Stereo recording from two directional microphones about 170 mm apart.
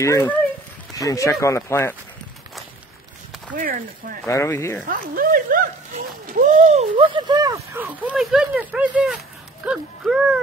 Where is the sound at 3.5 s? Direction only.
55° right (ahead or behind).